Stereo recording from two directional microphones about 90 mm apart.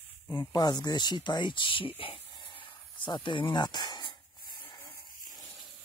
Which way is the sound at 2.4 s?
75° left (ahead or behind).